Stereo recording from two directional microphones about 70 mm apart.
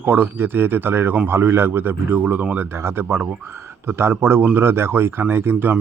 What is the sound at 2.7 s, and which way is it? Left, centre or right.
Speech, right.